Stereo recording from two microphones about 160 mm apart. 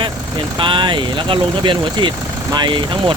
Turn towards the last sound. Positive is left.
turn(degrees=-30)  # may be behind; listen again after turning